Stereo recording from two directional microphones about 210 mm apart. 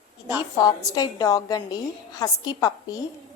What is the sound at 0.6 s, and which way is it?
A woman's voice, 20° left (ahead or behind).